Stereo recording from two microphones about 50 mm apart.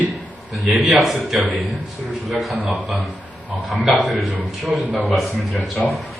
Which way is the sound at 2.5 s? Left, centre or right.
Right.